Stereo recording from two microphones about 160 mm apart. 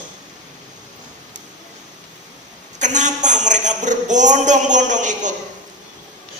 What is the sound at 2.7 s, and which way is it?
A woman's voice, 50° right (ahead or behind).